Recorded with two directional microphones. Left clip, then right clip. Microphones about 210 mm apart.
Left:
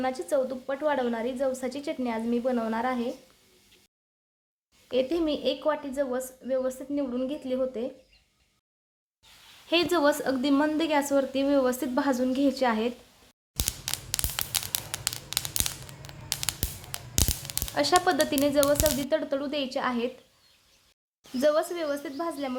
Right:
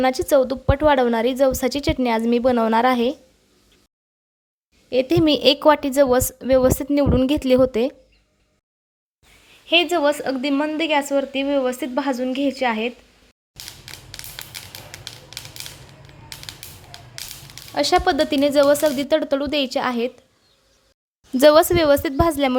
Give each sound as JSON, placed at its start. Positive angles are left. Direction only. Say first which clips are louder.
{"t": 0.0, "sound": "a woman's voice", "louder": "right 10 dB", "side_deg": -40}
{"t": 5.0, "sound": "a woman's voice", "louder": "right 11 dB", "side_deg": -40}
{"t": 9.6, "sound": "speech", "louder": "right 6 dB", "side_deg": 0}
{"t": 14.7, "sound": "music", "louder": "left 3 dB", "side_deg": 20}
{"t": 17.7, "sound": "speech", "louder": "right 6 dB", "side_deg": -20}
{"t": 21.4, "sound": "a woman's voice", "louder": "right 12 dB", "side_deg": -45}